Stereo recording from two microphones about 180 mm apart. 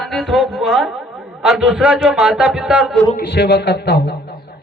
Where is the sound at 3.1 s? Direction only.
65° left (ahead or behind).